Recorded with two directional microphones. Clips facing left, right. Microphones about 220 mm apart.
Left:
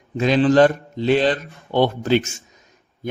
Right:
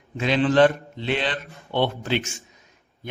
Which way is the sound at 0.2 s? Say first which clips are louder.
Left 4 dB; 40° left (ahead or behind).